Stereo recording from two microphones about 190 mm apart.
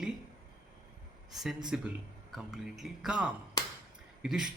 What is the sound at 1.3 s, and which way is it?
Speech, centre (ahead or behind).